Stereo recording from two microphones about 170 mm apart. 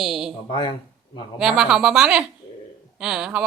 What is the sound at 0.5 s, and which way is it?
Speech, 30° left (ahead or behind).